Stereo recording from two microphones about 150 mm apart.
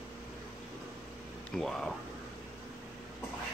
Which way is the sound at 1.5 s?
Centre (ahead or behind).